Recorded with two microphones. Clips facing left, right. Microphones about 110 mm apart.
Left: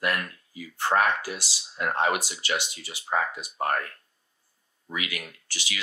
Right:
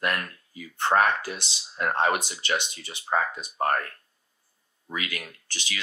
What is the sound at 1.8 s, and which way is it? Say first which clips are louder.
Speech: right 1 dB; 35° right (ahead or behind).